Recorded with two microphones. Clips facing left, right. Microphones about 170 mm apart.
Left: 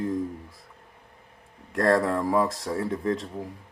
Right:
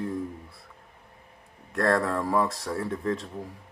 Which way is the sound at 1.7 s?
25° left (ahead or behind).